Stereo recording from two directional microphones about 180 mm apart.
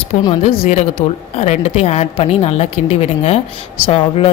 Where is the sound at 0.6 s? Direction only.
35° left (ahead or behind).